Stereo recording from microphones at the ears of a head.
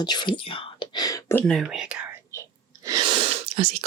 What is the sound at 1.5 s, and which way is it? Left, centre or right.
Speech, right.